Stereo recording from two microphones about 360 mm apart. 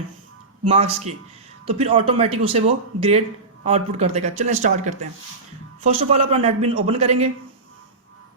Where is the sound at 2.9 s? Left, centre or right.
Right.